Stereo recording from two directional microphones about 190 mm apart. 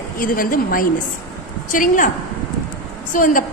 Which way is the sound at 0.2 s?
45° left (ahead or behind).